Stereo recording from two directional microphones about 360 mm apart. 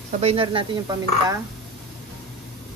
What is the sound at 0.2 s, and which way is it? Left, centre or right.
Dishes, centre.